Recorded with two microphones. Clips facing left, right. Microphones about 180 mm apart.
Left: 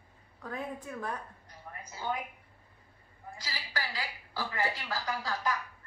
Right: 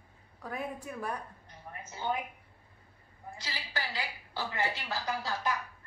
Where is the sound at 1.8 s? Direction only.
25° right (ahead or behind).